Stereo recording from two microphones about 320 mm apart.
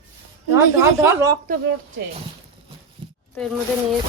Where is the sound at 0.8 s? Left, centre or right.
Centre.